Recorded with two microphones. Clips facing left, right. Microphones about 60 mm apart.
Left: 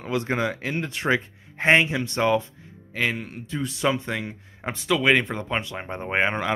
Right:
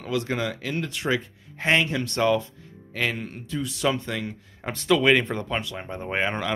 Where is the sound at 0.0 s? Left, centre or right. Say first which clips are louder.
Left 2 dB; left.